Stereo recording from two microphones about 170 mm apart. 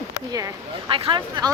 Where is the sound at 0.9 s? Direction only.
30° right (ahead or behind).